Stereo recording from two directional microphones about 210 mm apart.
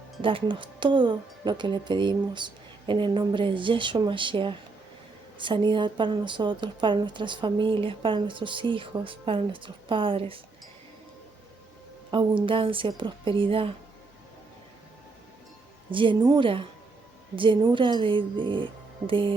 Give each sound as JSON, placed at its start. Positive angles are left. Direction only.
{"t": 0.2, "sound": "a woman's voice", "side_deg": -25}
{"t": 12.1, "sound": "a woman's voice", "side_deg": -25}
{"t": 15.9, "sound": "a woman's voice", "side_deg": -25}